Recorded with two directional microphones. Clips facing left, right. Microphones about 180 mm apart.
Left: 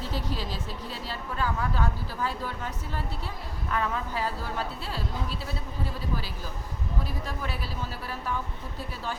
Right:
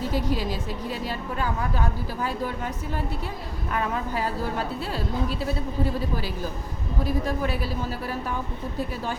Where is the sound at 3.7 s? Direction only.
15° right (ahead or behind).